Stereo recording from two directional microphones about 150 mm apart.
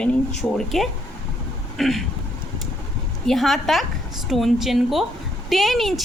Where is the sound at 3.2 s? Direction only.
Centre (ahead or behind).